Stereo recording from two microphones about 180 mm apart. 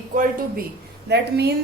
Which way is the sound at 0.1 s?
50° right (ahead or behind).